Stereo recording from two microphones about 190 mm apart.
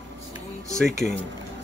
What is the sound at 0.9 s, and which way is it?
Speech, 40° left (ahead or behind).